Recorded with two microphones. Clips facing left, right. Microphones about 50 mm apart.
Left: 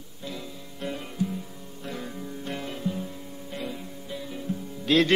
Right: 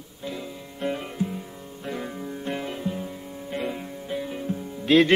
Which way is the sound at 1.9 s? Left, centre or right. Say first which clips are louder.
Right 4 dB; centre.